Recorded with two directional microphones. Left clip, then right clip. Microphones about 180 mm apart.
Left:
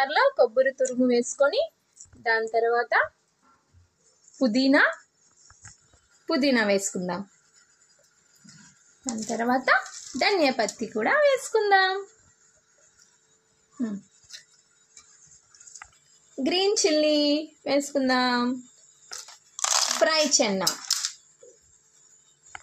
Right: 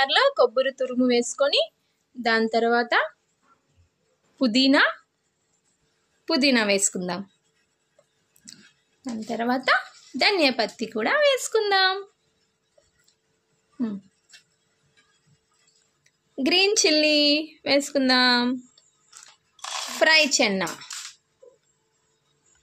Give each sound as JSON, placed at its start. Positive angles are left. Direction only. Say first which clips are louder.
{"t": 0.0, "sound": "speech", "louder": "right 2 dB", "side_deg": -10}
{"t": 4.4, "sound": "speech", "louder": "right 1 dB", "side_deg": -10}
{"t": 6.2, "sound": "speech", "louder": "right 2 dB", "side_deg": -10}
{"t": 9.1, "sound": "speech", "louder": "left 1 dB", "side_deg": -10}
{"t": 16.3, "sound": "speech", "louder": "right 3 dB", "side_deg": -10}
{"t": 20.0, "sound": "speech", "louder": "right 6 dB", "side_deg": -15}